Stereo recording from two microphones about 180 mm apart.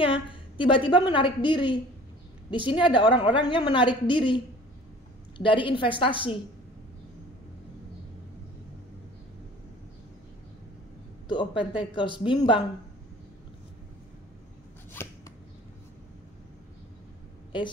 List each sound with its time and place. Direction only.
0.0 s a woman's voice: 30° left (ahead or behind)
5.4 s a woman's voice: 30° left (ahead or behind)
11.2 s a woman's voice: 25° left (ahead or behind)
14.9 s a sound: 15° left (ahead or behind)